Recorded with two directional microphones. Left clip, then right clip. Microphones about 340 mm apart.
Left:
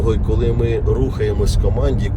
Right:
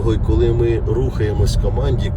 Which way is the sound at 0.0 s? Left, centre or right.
Centre.